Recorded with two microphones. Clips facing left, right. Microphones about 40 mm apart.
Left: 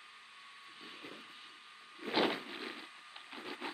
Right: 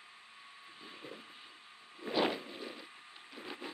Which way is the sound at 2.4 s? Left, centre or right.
Left.